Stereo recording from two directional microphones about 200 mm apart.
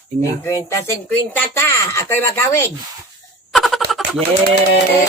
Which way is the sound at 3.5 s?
Centre (ahead or behind).